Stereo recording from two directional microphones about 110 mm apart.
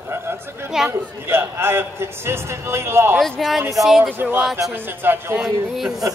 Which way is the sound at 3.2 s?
Centre (ahead or behind).